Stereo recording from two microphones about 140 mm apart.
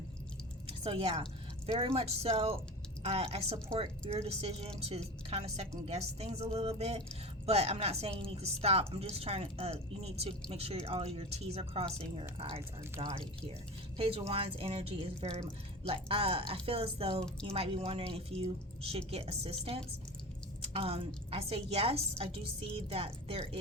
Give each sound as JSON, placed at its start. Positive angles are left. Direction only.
{"t": 0.7, "sound": "a woman's voice", "side_deg": -40}
{"t": 5.9, "sound": "a woman's voice", "side_deg": -50}
{"t": 20.7, "sound": "a woman's voice", "side_deg": -40}